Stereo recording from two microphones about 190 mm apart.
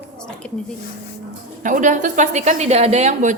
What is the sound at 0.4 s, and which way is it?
Speech, 5° left (ahead or behind).